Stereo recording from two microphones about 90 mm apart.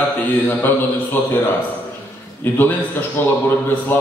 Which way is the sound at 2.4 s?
25° left (ahead or behind).